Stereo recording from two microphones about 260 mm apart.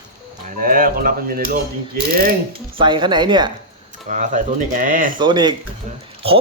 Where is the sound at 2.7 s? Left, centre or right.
Centre.